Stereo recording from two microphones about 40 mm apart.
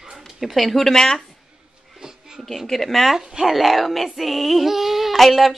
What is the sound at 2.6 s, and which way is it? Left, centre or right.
Speech, centre.